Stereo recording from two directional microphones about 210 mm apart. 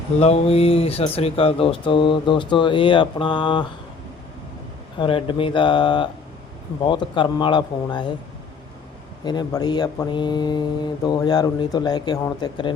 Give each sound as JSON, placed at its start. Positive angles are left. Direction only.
{"t": 0.2, "sound": "speech", "side_deg": 30}
{"t": 4.9, "sound": "speech", "side_deg": 25}
{"t": 9.2, "sound": "speech", "side_deg": 20}